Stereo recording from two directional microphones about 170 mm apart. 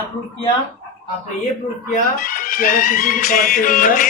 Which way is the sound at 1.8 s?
50° left (ahead or behind).